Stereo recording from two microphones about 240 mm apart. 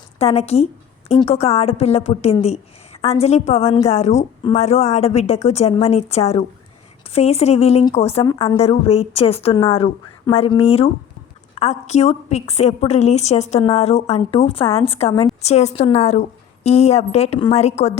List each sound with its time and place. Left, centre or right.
0.2 s a woman's voice: left